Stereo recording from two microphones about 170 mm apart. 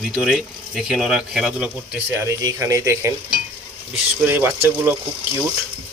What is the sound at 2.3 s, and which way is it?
Speech, 20° right (ahead or behind).